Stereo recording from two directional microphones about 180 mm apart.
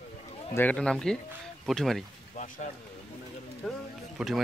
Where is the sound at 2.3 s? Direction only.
40° left (ahead or behind).